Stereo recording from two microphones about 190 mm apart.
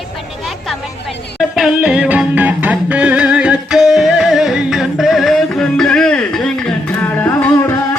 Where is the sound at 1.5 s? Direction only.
5° right (ahead or behind).